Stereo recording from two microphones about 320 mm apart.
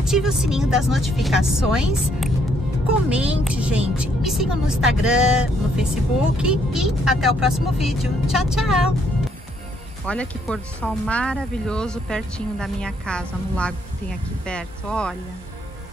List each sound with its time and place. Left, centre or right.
0.0 s speech: centre
10.0 s speech: centre